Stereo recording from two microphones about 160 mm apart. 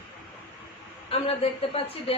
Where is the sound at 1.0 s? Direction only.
40° left (ahead or behind).